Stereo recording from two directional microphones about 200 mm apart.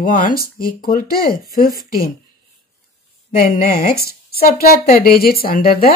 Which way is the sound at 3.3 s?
45° left (ahead or behind).